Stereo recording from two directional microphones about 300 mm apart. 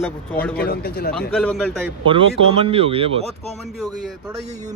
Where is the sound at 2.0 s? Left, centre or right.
Centre.